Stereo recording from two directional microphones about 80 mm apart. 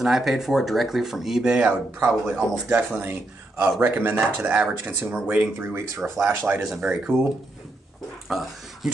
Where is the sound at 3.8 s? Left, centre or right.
Right.